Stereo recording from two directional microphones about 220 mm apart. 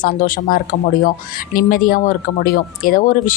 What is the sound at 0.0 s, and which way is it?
A woman's voice, 40° left (ahead or behind).